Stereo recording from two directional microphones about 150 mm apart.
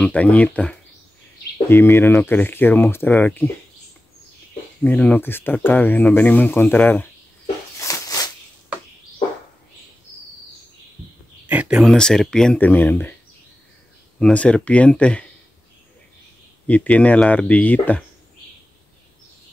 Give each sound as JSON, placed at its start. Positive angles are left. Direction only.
{"t": 0.0, "sound": "speech", "side_deg": 10}
{"t": 4.8, "sound": "speech", "side_deg": 10}
{"t": 7.8, "sound": "a sound", "side_deg": 25}
{"t": 11.4, "sound": "a sound", "side_deg": -10}
{"t": 11.8, "sound": "speech", "side_deg": 5}
{"t": 14.2, "sound": "speech", "side_deg": 10}
{"t": 16.6, "sound": "speech", "side_deg": 10}